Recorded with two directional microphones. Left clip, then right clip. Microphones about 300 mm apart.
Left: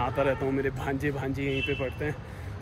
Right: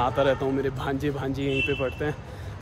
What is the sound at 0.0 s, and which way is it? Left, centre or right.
Speech, centre.